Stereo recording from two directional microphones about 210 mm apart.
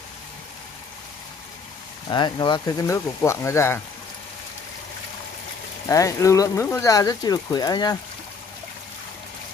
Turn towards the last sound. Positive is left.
turn(degrees=20)  # may be behind; listen again after turning